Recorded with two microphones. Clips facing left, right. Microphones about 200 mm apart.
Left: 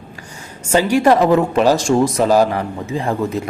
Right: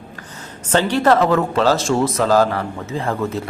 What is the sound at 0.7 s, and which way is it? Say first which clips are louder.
A man's voice: left 2 dB; 10° left (ahead or behind).